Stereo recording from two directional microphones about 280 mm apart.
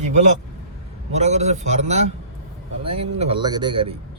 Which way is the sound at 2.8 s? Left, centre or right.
Right.